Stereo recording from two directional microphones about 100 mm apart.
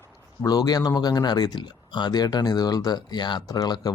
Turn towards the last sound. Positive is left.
turn(degrees=45)  # may be behind; listen again after turning